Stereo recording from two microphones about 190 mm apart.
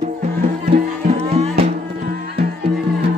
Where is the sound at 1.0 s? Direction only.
35° right (ahead or behind).